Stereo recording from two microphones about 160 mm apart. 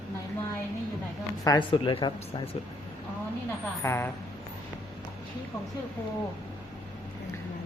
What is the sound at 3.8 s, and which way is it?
Speech, 15° left (ahead or behind).